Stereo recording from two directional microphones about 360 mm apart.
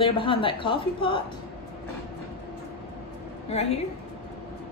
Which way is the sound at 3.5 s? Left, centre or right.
Centre.